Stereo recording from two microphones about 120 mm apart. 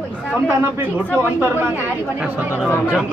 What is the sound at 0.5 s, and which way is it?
Speech, 15° right (ahead or behind).